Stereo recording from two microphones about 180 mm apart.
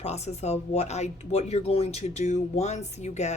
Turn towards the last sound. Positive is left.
turn(degrees=40)  # may be behind; listen again after turning